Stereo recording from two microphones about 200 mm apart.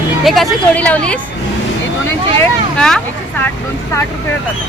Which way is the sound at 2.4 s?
5° left (ahead or behind).